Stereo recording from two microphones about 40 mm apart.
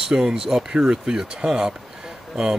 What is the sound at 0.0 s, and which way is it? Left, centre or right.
Speech, centre.